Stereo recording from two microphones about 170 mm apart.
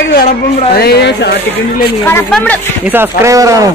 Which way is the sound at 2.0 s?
15° left (ahead or behind).